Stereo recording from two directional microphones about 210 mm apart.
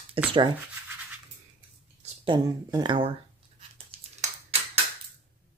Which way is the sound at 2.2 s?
20° right (ahead or behind).